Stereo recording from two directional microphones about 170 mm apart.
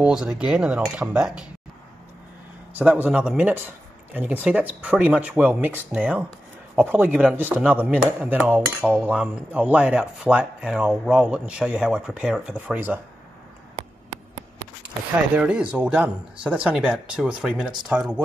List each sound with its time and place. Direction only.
0.0 s speech: 5° right (ahead or behind)
2.7 s speech: 10° right (ahead or behind)
15.3 s speech: 5° right (ahead or behind)